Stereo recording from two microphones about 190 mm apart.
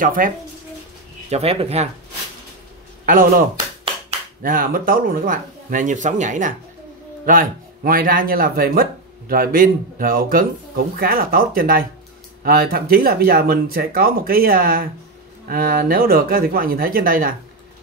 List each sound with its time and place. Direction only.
0.0 s speech: 45° right (ahead or behind)
1.3 s speech: 30° right (ahead or behind)
3.1 s speech: 50° right (ahead or behind)